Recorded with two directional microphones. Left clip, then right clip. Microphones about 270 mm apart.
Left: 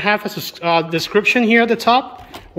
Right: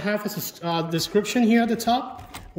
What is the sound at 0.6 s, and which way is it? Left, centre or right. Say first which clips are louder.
A man's voice: left 9 dB; centre.